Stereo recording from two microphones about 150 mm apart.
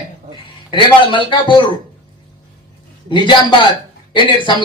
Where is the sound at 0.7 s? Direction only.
35° left (ahead or behind).